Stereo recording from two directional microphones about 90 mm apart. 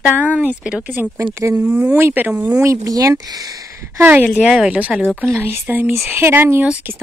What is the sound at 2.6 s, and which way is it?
Speech, 35° right (ahead or behind).